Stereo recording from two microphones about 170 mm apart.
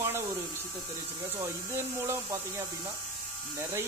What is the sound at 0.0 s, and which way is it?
Electric shaver, 15° right (ahead or behind).